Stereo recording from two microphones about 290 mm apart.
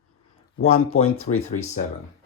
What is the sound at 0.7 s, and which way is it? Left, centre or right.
Speech, left.